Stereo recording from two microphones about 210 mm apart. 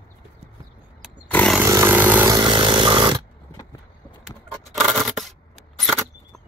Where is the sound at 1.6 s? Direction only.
10° right (ahead or behind).